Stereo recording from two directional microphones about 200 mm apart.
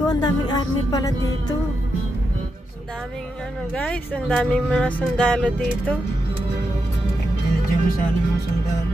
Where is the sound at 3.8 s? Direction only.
5° left (ahead or behind).